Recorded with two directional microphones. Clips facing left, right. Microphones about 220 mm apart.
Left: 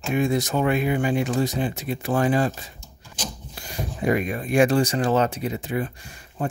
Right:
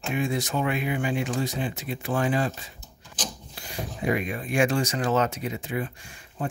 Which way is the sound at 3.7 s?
45° left (ahead or behind).